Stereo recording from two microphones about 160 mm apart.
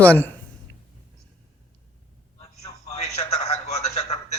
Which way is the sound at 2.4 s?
45° left (ahead or behind).